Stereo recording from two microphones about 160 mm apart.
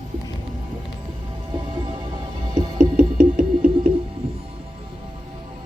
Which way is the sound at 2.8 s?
60° right (ahead or behind).